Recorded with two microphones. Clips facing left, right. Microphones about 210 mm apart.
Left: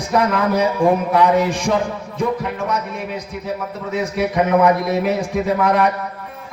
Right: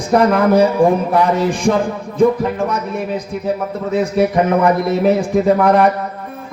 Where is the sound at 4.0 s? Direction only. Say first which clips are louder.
Right 4 dB; 50° right (ahead or behind).